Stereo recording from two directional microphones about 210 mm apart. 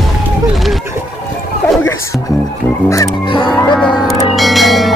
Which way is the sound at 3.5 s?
5° left (ahead or behind).